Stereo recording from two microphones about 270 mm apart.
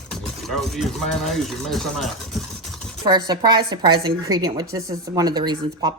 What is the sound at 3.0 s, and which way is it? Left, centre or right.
A woman's voice, centre.